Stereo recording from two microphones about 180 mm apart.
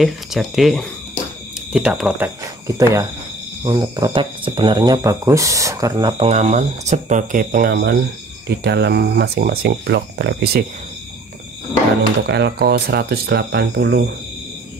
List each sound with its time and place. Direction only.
0.0 s speech: centre (ahead or behind); by 10.6 s 65° right (ahead or behind)
12.3 s speech: 70° right (ahead or behind)